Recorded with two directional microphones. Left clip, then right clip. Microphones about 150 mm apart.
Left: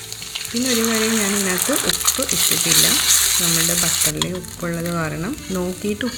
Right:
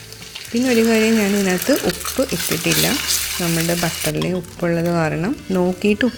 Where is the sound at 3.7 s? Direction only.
45° right (ahead or behind).